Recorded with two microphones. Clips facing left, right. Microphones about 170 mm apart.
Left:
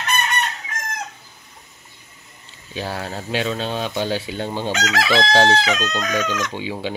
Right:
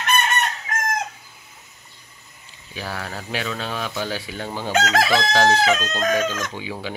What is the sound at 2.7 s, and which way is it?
Speech, 25° left (ahead or behind).